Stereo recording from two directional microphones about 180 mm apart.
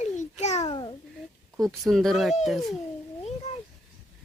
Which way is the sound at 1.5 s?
Centre (ahead or behind).